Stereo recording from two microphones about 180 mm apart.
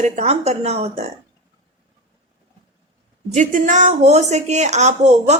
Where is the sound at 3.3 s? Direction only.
45° right (ahead or behind).